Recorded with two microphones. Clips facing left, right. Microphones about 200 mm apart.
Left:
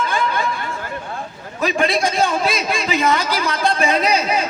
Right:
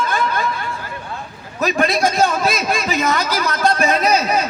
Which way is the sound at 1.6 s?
45° right (ahead or behind).